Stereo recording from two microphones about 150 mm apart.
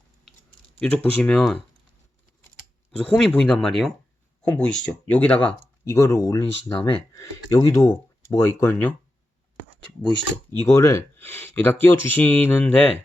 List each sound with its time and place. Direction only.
0.8 s speech: 10° left (ahead or behind)
3.0 s speech: 5° left (ahead or behind); by 6.4 s 20° left (ahead or behind)
6.7 s speech: 35° left (ahead or behind)
7.3 s speech: 20° left (ahead or behind)
10.6 s speech: 20° left (ahead or behind)